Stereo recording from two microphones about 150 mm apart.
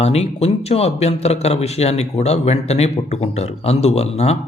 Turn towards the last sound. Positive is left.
turn(degrees=45)  # may be behind; listen again after turning